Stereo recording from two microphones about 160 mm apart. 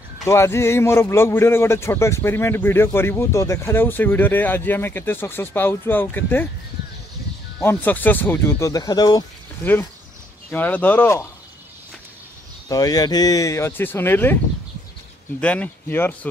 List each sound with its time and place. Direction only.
0.2 s speech: 15° left (ahead or behind)
7.6 s speech: 10° left (ahead or behind)
10.5 s speech: 10° left (ahead or behind)
12.6 s speech: 20° left (ahead or behind)
15.4 s speech: 10° left (ahead or behind)